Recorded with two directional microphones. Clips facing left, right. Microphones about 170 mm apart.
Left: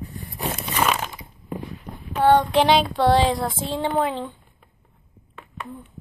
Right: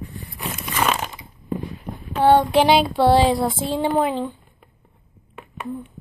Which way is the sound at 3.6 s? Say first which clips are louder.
Right 1 dB; 10° right (ahead or behind).